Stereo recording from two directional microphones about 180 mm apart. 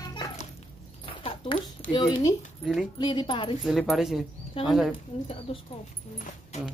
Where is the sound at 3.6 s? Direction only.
Centre (ahead or behind).